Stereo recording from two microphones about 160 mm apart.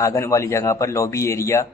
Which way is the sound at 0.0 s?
20° left (ahead or behind).